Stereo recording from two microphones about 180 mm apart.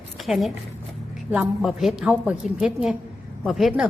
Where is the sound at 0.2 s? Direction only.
Centre (ahead or behind).